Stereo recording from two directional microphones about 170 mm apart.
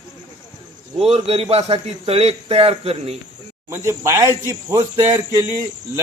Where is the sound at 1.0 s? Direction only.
35° right (ahead or behind).